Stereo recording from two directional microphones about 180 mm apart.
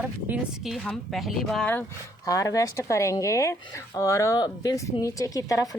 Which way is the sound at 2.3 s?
20° left (ahead or behind).